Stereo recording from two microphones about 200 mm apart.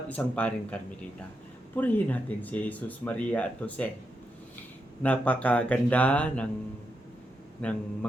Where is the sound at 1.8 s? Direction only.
10° left (ahead or behind).